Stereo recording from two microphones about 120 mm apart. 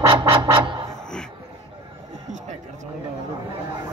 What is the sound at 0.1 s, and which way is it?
Music, 35° right (ahead or behind).